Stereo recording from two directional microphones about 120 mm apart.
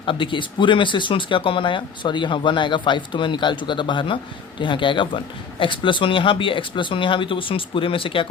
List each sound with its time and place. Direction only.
0.0 s speech: 45° left (ahead or behind)